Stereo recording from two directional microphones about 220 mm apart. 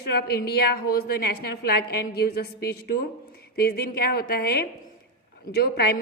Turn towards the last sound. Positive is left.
turn(degrees=45)  # may be behind; listen again after turning